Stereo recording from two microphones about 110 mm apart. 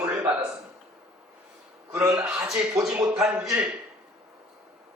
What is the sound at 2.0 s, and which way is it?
Speech, 30° right (ahead or behind).